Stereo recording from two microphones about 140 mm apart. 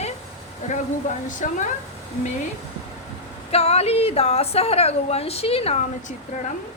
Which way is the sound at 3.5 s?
45° left (ahead or behind).